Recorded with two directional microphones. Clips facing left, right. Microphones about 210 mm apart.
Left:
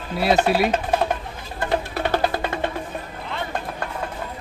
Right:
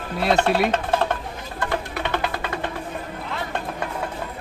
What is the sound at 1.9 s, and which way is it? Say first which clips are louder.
Music: left 4 dB; 35° left (ahead or behind).